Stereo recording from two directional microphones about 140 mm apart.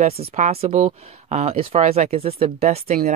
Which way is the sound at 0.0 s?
50° right (ahead or behind).